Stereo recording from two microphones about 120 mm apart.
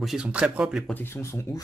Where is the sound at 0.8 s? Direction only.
15° left (ahead or behind).